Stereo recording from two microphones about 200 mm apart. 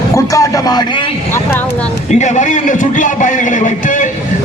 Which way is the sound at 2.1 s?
35° left (ahead or behind).